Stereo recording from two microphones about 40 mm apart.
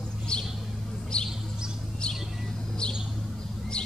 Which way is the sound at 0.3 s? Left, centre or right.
Centre.